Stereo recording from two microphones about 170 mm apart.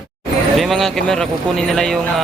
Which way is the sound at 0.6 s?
Centre (ahead or behind).